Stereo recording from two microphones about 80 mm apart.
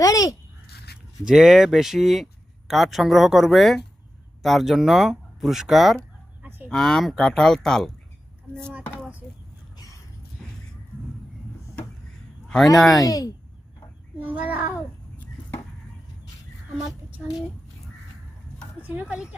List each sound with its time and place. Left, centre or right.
0.0 s speech: left
1.2 s speech: centre
6.4 s cattle: right
6.7 s speech: centre
9.7 s dog: left
10.4 s music: centre
13.0 s speech: left
14.2 s a child's voice: centre
18.8 s a sound: right
19.1 s a woman's voice: centre